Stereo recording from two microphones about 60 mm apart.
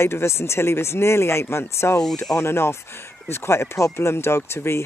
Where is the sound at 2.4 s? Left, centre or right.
Left.